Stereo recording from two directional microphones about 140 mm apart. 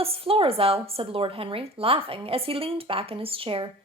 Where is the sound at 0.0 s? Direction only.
45° right (ahead or behind).